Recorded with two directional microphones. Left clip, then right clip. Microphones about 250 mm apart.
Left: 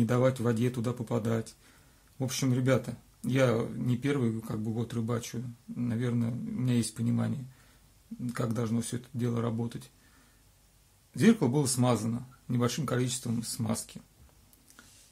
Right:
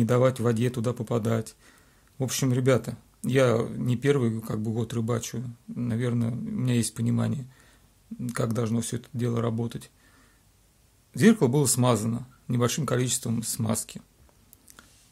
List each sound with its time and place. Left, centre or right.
0.0 s speech: right
11.1 s speech: right